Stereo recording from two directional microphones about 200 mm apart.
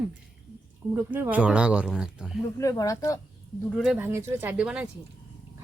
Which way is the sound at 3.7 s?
5° right (ahead or behind).